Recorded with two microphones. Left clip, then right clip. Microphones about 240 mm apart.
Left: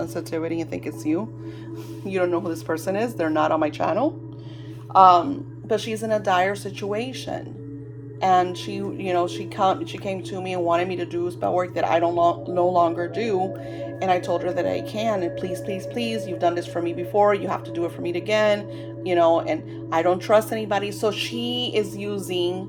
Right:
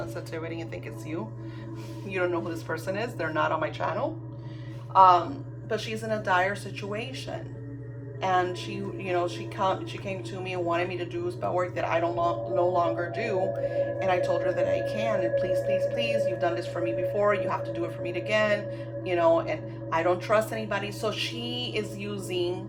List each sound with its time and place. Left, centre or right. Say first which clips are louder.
0.0 s speech: left 8 dB; left